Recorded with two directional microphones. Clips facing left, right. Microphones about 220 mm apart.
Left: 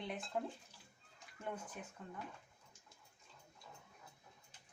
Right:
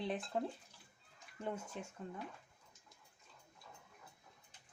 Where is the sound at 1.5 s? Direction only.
25° right (ahead or behind).